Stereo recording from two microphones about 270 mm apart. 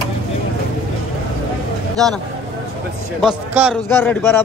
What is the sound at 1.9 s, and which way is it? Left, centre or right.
Speech, centre.